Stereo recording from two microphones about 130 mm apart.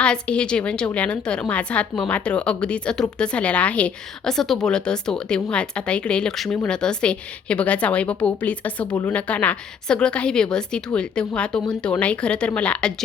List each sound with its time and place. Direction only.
0.0 s speech: 10° left (ahead or behind)